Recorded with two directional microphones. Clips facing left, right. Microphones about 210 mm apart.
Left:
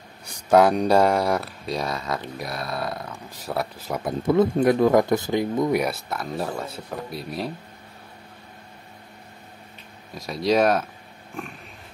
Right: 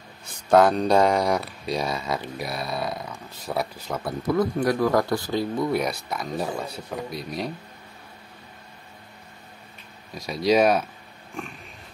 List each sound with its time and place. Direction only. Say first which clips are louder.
0.2 s speech: left 1 dB; 10° left (ahead or behind)
3.9 s speech: left 4 dB; 20° left (ahead or behind); by 7.5 s centre (ahead or behind)
10.1 s speech: right 1 dB; centre (ahead or behind)